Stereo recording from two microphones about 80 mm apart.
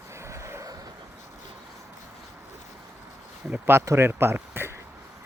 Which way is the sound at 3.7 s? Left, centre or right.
Right.